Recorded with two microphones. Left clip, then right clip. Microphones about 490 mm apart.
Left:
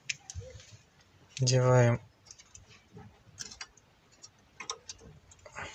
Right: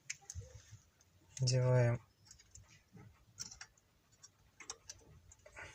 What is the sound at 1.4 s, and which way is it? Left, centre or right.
Speech, left.